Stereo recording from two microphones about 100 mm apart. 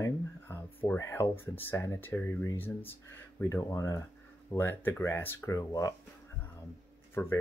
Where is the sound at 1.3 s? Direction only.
20° left (ahead or behind).